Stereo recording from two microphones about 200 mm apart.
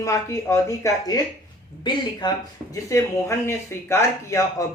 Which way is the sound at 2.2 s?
20° left (ahead or behind).